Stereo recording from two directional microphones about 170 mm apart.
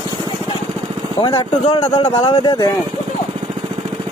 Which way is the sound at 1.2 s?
30° left (ahead or behind).